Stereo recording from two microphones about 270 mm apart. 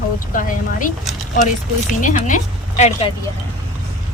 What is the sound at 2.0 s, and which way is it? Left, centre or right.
A woman's voice, left.